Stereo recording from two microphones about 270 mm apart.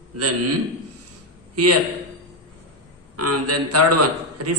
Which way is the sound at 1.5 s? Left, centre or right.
Right.